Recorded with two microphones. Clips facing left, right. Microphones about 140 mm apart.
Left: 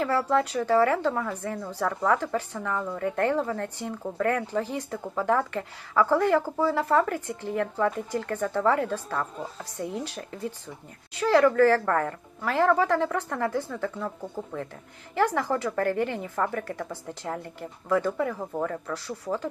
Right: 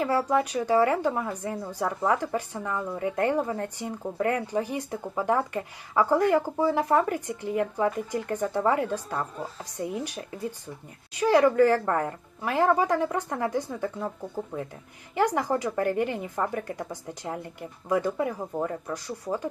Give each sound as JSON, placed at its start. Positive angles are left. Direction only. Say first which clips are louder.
{"t": 0.0, "sound": "a woman's voice", "louder": "even", "side_deg": -15}
{"t": 15.1, "sound": "a woman's voice", "louder": "even", "side_deg": -15}